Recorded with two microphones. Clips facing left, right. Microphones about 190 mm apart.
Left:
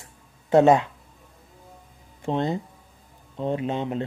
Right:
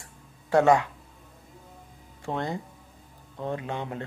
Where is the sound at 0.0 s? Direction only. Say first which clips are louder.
Right 1 dB; 20° left (ahead or behind).